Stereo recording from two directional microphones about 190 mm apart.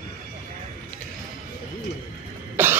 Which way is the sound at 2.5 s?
10° right (ahead or behind).